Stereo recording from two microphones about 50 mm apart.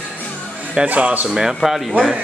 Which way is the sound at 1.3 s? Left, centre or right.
Centre.